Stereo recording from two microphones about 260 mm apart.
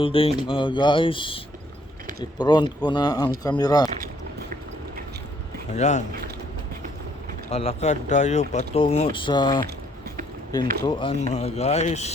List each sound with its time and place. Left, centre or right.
0.0 s speech: left
2.4 s speech: centre
5.7 s speech: left
7.5 s speech: left